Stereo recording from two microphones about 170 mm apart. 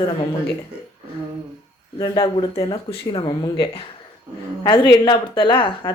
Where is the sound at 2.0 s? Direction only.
25° left (ahead or behind).